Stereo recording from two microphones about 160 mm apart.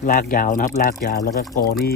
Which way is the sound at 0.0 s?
60° left (ahead or behind).